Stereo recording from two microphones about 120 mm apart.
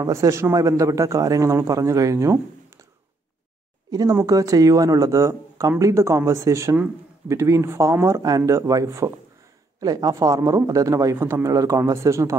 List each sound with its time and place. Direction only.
0.0 s speech: 25° right (ahead or behind)
3.9 s speech: 30° right (ahead or behind)